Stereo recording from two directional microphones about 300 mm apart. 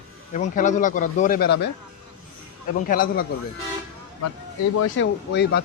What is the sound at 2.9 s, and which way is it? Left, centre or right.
Speech, left.